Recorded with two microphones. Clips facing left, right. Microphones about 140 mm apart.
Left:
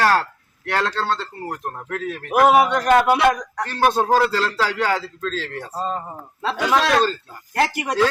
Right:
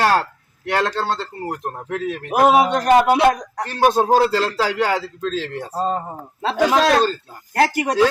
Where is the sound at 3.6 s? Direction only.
20° right (ahead or behind).